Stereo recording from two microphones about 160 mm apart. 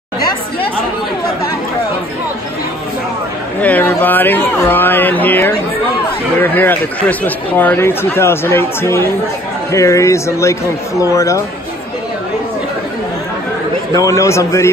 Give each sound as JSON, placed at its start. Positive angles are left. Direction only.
{"t": 0.2, "sound": "chatter", "side_deg": 25}
{"t": 3.6, "sound": "a man's voice", "side_deg": 10}
{"t": 13.9, "sound": "a man's voice", "side_deg": 20}